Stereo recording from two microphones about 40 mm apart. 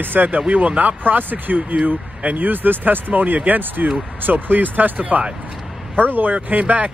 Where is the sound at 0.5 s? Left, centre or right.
Right.